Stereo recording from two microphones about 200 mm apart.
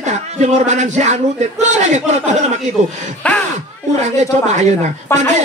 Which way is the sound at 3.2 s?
5° left (ahead or behind).